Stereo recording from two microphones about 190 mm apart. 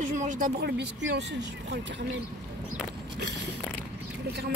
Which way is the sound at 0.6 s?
60° right (ahead or behind).